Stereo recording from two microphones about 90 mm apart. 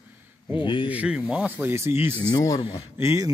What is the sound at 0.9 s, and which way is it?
Speech, 15° right (ahead or behind).